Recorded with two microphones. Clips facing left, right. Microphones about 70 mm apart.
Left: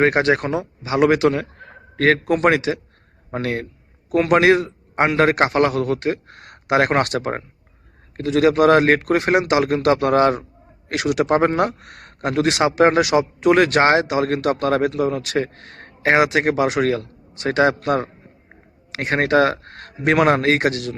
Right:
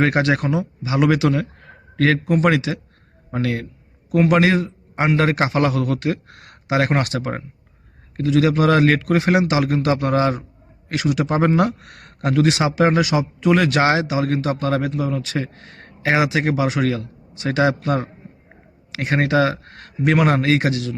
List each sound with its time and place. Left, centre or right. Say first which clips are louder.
0.0 s a man's voice: left 2 dB; left
0.4 s a man's voice: right 1 dB; left
11.3 s a man's voice: even; left